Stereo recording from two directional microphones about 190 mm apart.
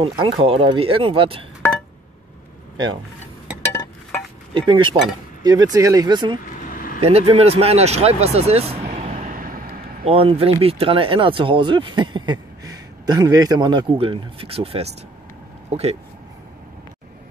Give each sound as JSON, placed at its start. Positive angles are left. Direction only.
{"t": 0.0, "sound": "speech", "side_deg": -25}
{"t": 3.7, "sound": "chink", "side_deg": 15}
{"t": 4.6, "sound": "speech", "side_deg": -25}
{"t": 6.6, "sound": "vehicle", "side_deg": 45}
{"t": 7.0, "sound": "speech", "side_deg": -30}
{"t": 10.0, "sound": "speech", "side_deg": -30}